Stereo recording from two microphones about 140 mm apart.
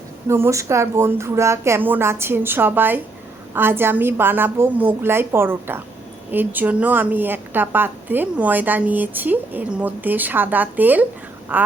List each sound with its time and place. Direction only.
0.3 s a woman's voice: 20° right (ahead or behind)